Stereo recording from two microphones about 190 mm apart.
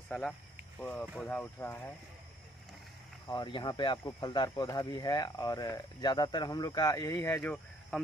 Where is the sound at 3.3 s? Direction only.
25° left (ahead or behind).